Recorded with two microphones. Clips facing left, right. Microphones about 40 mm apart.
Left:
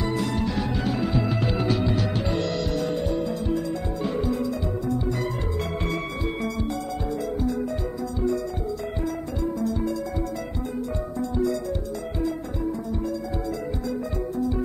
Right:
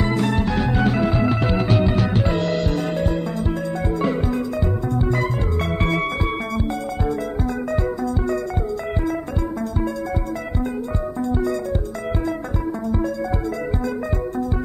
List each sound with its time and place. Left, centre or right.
0.0 s music: right